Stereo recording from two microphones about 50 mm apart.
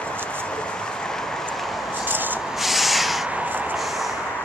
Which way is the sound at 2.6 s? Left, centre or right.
Centre.